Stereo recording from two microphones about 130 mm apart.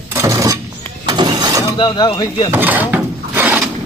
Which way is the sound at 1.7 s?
35° left (ahead or behind).